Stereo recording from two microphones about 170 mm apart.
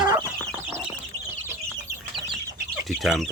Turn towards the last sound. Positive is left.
turn(degrees=0)  # may be behind; listen again after turning